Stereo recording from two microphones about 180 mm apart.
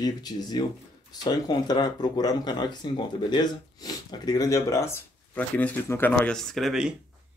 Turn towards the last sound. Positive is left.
turn(degrees=0)  # may be behind; listen again after turning